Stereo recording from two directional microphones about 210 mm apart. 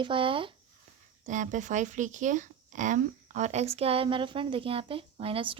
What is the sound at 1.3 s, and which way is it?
Speech, 35° right (ahead or behind).